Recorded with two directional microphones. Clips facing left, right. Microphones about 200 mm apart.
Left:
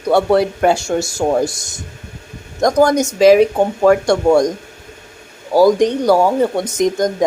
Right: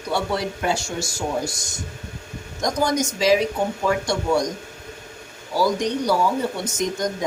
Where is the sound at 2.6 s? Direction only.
55° left (ahead or behind).